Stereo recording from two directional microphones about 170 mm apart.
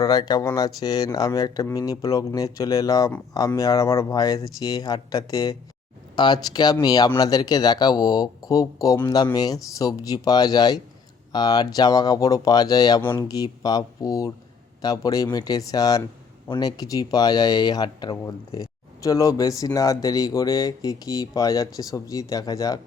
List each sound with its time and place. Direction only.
0.0 s speech: 25° left (ahead or behind)